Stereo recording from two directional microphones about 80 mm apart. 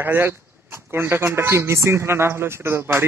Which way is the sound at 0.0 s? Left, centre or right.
Right.